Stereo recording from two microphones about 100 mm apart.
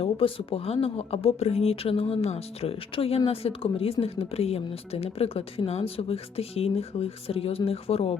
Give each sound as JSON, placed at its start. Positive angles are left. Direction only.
{"t": 0.0, "sound": "speech", "side_deg": 70}
{"t": 4.0, "sound": "speech", "side_deg": 85}